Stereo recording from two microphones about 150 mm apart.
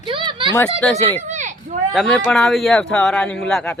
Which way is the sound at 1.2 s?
55° right (ahead or behind).